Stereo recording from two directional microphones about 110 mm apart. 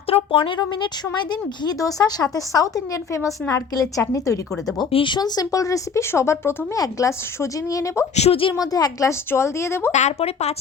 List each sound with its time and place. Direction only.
0.1 s speech: 50° left (ahead or behind)
1.3 s speech: 35° left (ahead or behind)
3.1 s a woman's voice: 25° left (ahead or behind)
4.9 s a woman's voice: 55° left (ahead or behind)
5.1 s a woman's voice: 35° left (ahead or behind)
8.1 s a woman's voice: 70° left (ahead or behind)
8.5 s a woman's voice: 35° left (ahead or behind)
9.9 s speech: 90° left